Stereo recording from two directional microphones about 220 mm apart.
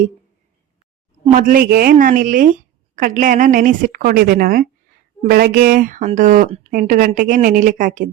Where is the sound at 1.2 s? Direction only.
35° right (ahead or behind).